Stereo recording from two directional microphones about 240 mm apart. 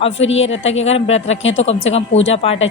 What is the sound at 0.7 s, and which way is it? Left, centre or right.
Speech, left.